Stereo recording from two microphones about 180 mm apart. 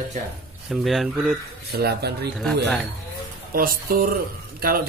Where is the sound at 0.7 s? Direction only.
Centre (ahead or behind).